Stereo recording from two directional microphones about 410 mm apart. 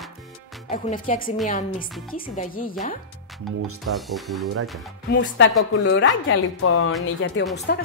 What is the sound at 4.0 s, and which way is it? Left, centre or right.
Speech, centre.